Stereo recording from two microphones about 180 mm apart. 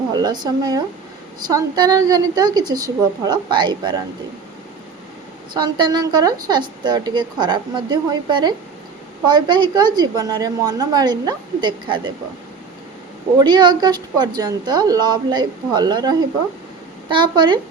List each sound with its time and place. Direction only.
0.1 s a woman's voice: 20° right (ahead or behind)
5.5 s a woman's voice: 25° right (ahead or behind)
13.4 s a woman's voice: 25° right (ahead or behind)